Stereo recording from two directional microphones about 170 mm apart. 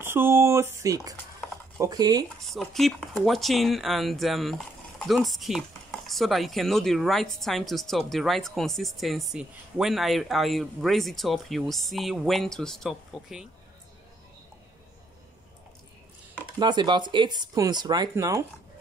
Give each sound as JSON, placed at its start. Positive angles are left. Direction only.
{"t": 0.0, "sound": "speech", "side_deg": -15}
{"t": 2.2, "sound": "speech", "side_deg": 0}
{"t": 16.5, "sound": "speech", "side_deg": -25}